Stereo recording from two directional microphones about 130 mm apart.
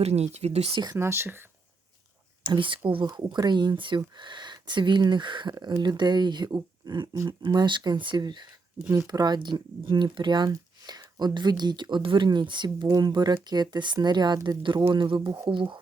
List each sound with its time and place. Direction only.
0.0 s speech: 55° right (ahead or behind)
0.9 s speech: 20° right (ahead or behind)
2.4 s speech: 40° right (ahead or behind)